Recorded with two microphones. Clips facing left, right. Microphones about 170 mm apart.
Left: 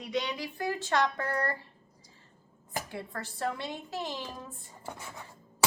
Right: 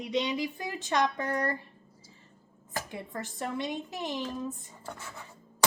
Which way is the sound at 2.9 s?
20° right (ahead or behind).